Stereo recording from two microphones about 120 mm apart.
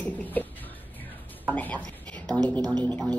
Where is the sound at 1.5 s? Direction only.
10° left (ahead or behind).